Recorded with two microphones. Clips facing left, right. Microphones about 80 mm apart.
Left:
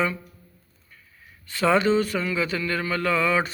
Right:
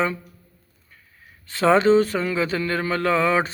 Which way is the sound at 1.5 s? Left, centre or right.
Right.